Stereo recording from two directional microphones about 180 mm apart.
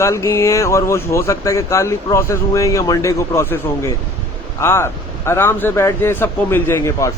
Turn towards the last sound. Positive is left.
turn(degrees=15)  # may be behind; listen again after turning